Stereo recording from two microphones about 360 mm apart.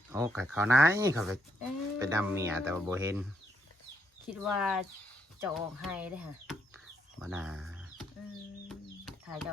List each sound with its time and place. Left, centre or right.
0.1 s speech: centre
4.3 s speech: centre
8.7 s chicken: centre